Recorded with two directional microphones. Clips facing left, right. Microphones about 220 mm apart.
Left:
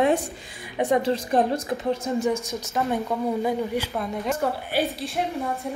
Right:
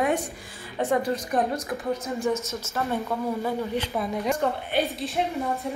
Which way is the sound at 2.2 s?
15° left (ahead or behind).